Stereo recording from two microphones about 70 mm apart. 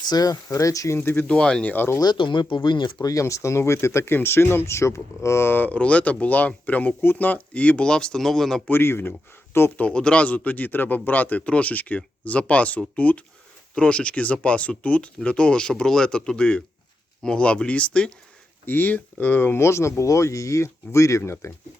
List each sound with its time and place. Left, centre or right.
0.0 s speech: left
0.4 s speech: left
0.9 s speech: left; by 1.6 s centre
1.6 s a man's voice: left
2.0 s speech: left
2.6 s speech: left
5.7 s a man's voice: centre
8.7 s speech: left
9.7 s a man's voice: centre
18.6 s speech: left